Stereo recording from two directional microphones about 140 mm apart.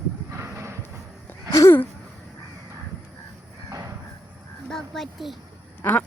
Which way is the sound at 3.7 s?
25° right (ahead or behind).